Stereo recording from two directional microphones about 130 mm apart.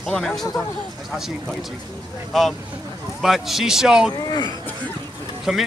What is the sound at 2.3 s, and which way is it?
Speech, centre (ahead or behind).